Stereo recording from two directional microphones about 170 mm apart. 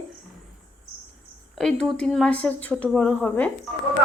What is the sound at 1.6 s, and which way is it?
Speech, 5° left (ahead or behind).